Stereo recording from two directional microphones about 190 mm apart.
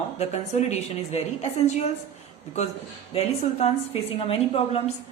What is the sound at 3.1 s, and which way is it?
A woman's voice, 35° left (ahead or behind).